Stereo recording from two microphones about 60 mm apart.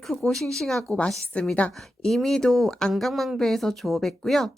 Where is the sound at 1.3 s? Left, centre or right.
Left.